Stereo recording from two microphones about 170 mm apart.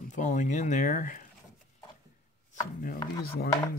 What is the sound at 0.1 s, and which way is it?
Speech, 45° left (ahead or behind).